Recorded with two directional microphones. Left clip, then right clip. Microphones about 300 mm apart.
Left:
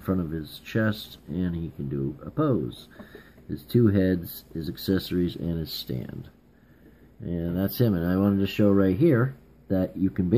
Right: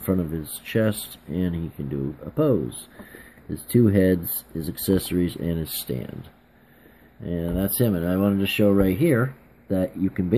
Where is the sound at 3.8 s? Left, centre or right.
Right.